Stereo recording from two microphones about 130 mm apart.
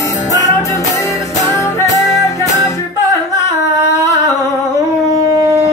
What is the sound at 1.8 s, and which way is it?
Music, 25° left (ahead or behind).